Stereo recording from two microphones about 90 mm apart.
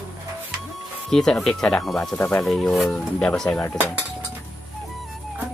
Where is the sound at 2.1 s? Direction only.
15° left (ahead or behind).